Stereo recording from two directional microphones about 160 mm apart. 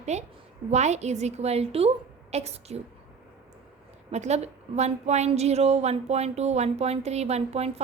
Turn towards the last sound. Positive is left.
turn(degrees=-40)  # may be behind; listen again after turning